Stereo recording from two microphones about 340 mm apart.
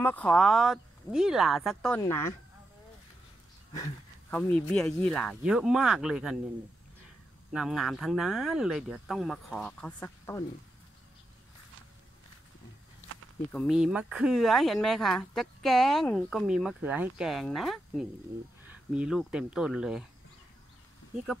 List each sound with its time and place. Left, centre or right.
0.0 s speech: centre
3.7 s speech: centre
7.5 s speech: centre
13.5 s speech: centre